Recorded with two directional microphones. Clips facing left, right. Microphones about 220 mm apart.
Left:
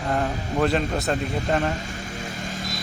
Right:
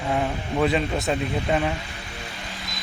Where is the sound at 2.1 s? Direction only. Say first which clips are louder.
Left 5 dB; 45° left (ahead or behind).